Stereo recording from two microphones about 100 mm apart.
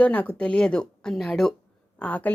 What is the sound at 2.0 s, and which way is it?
Speech, 15° left (ahead or behind).